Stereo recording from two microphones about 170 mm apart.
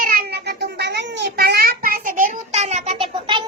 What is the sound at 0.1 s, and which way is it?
Cat, 60° right (ahead or behind).